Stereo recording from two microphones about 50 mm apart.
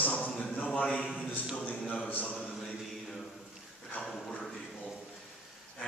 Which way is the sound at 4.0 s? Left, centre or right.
Left.